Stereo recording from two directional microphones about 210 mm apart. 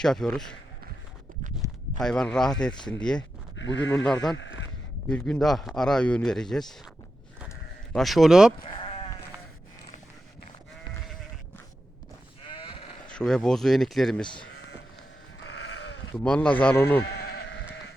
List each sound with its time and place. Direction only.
0.0 s a man's voice: centre (ahead or behind)
1.6 s a sound: 15° right (ahead or behind)
2.0 s a man's voice: 5° left (ahead or behind)
3.6 s speech: 60° left (ahead or behind)
3.9 s a man's voice: 5° left (ahead or behind)
4.4 s speech: 60° left (ahead or behind)
5.0 s a man's voice: 5° left (ahead or behind)
7.9 s a man's voice: centre (ahead or behind)
8.6 s sheep: 25° left (ahead or behind)
12.5 s sheep: 25° left (ahead or behind)
13.1 s a man's voice: 5° left (ahead or behind)
15.4 s sheep: 55° left (ahead or behind)
16.1 s speech: 5° left (ahead or behind)
17.2 s sheep: 55° left (ahead or behind)